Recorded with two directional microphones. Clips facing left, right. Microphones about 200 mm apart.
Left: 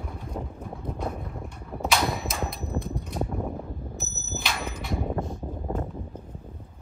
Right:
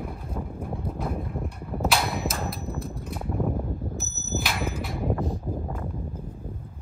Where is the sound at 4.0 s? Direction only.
Centre (ahead or behind).